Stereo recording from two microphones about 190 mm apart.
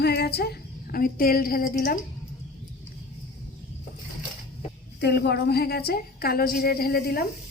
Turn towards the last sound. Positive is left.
turn(degrees=55)  # may be behind; listen again after turning